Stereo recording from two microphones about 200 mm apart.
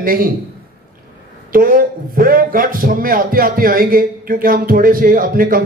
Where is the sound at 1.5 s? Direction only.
45° right (ahead or behind).